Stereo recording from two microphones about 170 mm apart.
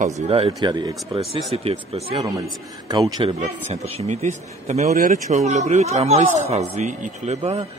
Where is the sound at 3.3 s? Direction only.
40° right (ahead or behind).